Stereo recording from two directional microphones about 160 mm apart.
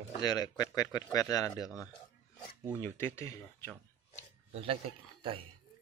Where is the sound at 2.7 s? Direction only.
15° left (ahead or behind).